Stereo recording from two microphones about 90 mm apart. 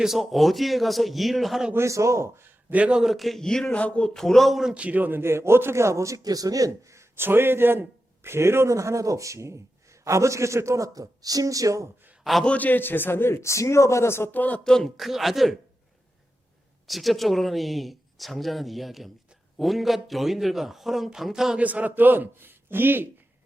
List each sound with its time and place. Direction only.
0.0 s a man's voice: 5° right (ahead or behind)
1.7 s a man's voice: 35° right (ahead or behind); by 4.7 s centre (ahead or behind)
4.7 s a man's voice: 15° right (ahead or behind); by 11.9 s 40° right (ahead or behind)
12.2 s a man's voice: centre (ahead or behind)
12.5 s a man's voice: 20° left (ahead or behind)
14.6 s a man's voice: 5° left (ahead or behind)
16.8 s a man's voice: centre (ahead or behind)
21.6 s a man's voice: 15° right (ahead or behind)